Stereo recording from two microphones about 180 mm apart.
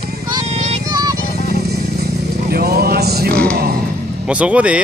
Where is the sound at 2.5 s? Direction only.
60° right (ahead or behind).